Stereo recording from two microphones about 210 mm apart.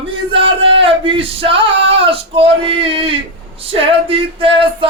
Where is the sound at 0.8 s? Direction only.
25° right (ahead or behind).